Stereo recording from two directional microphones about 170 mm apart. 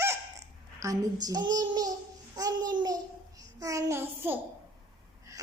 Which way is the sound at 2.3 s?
25° right (ahead or behind).